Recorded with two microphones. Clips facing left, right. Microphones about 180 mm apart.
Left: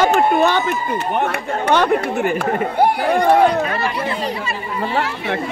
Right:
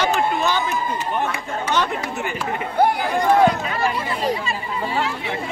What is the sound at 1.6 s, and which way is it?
Speech, 55° left (ahead or behind).